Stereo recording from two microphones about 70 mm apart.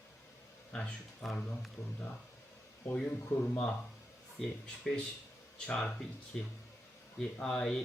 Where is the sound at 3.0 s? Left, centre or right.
Left.